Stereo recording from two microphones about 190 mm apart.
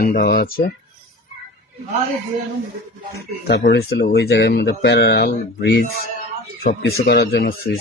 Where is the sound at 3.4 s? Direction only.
65° left (ahead or behind).